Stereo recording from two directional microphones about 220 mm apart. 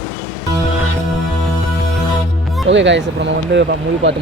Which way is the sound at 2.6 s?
55° right (ahead or behind).